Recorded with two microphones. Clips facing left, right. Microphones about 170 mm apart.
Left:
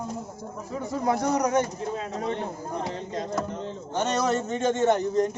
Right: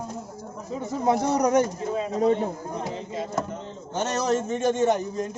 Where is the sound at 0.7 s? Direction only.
25° right (ahead or behind).